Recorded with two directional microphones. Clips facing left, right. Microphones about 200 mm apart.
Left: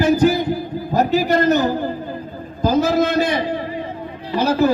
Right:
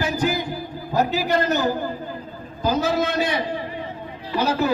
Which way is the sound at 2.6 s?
45° left (ahead or behind).